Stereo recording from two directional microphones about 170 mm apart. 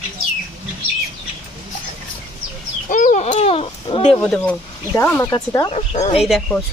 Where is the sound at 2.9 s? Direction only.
50° left (ahead or behind).